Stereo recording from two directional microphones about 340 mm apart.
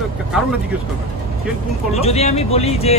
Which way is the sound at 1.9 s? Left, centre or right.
Centre.